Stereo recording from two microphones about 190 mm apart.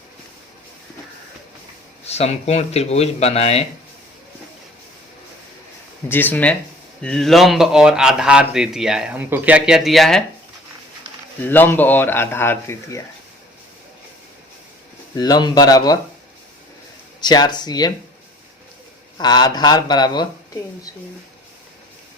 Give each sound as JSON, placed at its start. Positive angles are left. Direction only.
{"t": 2.0, "sound": "speech", "side_deg": 35}
{"t": 6.1, "sound": "a man's voice", "side_deg": 10}
{"t": 11.4, "sound": "speech", "side_deg": 10}
{"t": 15.1, "sound": "speech", "side_deg": 20}
{"t": 17.2, "sound": "speech", "side_deg": 20}
{"t": 19.1, "sound": "speech", "side_deg": 20}